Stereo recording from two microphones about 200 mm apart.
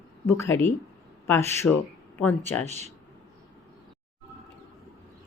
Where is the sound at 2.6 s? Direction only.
35° right (ahead or behind).